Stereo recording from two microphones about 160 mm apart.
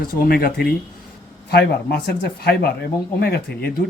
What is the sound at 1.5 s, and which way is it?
Speech, 85° left.